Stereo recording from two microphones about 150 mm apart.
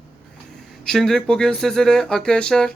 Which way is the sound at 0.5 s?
Centre (ahead or behind).